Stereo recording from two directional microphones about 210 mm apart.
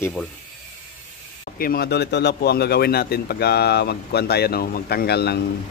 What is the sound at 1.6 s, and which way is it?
Speech, 45° left (ahead or behind).